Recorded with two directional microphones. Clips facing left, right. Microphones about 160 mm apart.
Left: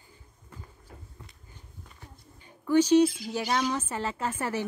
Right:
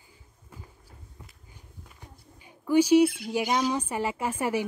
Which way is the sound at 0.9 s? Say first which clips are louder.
Left 4 dB; 90° left.